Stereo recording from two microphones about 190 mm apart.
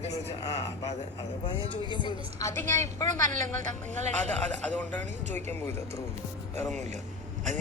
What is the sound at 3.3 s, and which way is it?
A man's voice, 40° right (ahead or behind).